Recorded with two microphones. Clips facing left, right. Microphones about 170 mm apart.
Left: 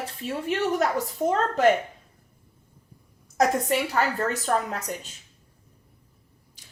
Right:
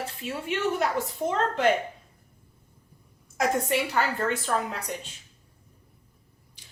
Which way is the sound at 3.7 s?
40° left (ahead or behind).